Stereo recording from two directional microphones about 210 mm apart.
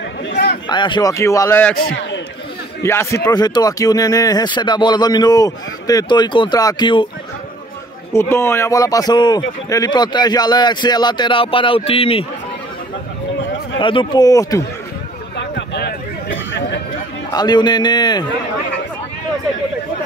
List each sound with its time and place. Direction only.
0.3 s a sound: 50° left (ahead or behind)
0.7 s speech: 20° left (ahead or behind)
1.8 s a man's voice: 55° left (ahead or behind)
2.8 s speech: 15° left (ahead or behind)
8.1 s speech: 10° left (ahead or behind)
13.7 s speech: 25° left (ahead or behind)
15.3 s a sound: 55° left (ahead or behind)
17.3 s speech: 20° left (ahead or behind)